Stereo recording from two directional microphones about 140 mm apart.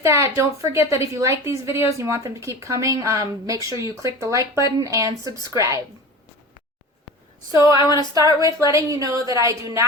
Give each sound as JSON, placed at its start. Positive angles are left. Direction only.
{"t": 0.0, "sound": "a woman's voice", "side_deg": -20}
{"t": 7.8, "sound": "speech", "side_deg": 30}
{"t": 8.4, "sound": "a woman's voice", "side_deg": -25}